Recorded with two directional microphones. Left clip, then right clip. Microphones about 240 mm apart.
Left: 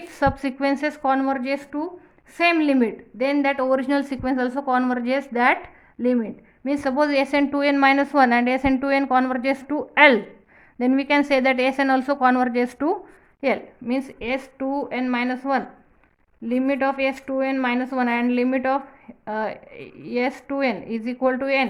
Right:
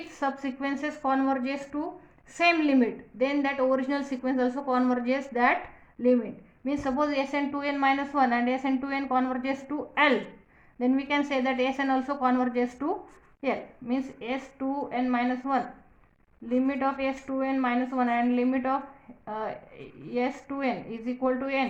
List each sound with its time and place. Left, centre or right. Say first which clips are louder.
0.1 s a woman's voice: left 9 dB; left
6.7 s a woman's voice: left 7 dB; left